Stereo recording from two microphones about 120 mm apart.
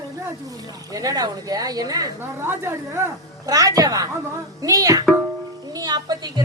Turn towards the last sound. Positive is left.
turn(degrees=-35)  # may be behind; listen again after turning